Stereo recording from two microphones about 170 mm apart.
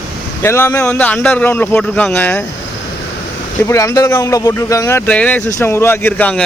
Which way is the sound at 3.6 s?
20° left (ahead or behind).